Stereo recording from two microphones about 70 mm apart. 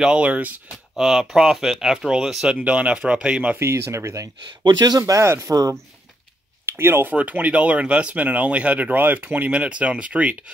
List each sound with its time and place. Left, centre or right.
0.0 s speech: centre
0.9 s speech: centre
2.5 s speech: centre
3.5 s speech: right
4.4 s speech: right
5.2 s speech: right
5.5 s speech: right
6.6 s speech: right
7.2 s speech: right